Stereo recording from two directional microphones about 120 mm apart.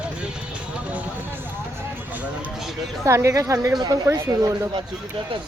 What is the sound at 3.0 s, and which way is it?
Speech, 25° right (ahead or behind).